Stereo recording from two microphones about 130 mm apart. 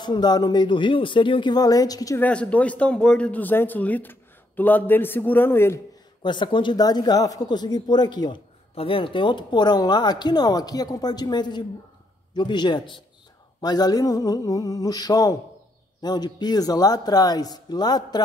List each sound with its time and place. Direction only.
0.0 s speech: 35° left (ahead or behind)
2.1 s speech: 10° left (ahead or behind)
6.2 s speech: 35° left (ahead or behind)
8.7 s speech: 45° left (ahead or behind)
13.6 s a sound: 30° left (ahead or behind)
16.0 s speech: 35° left (ahead or behind)